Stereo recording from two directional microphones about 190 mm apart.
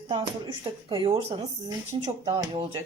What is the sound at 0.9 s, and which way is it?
Speech, 25° right (ahead or behind).